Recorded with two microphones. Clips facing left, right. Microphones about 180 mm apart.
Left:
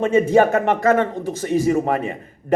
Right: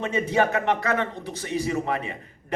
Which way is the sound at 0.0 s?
45° left (ahead or behind).